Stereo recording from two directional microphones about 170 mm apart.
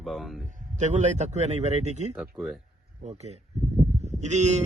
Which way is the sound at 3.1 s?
40° right (ahead or behind).